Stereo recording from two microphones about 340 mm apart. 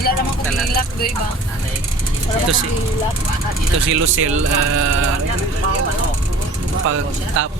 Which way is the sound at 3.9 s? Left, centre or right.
Right.